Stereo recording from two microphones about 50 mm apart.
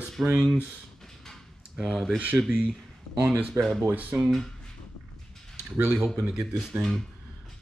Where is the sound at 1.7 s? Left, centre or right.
Centre.